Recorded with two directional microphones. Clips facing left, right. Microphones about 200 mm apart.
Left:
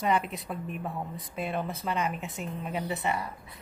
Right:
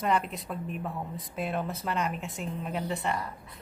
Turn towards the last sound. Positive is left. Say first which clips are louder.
# even
turn(degrees=5)  # may be behind; listen again after turning